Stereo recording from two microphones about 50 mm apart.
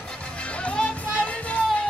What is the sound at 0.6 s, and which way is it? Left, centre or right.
Music, left.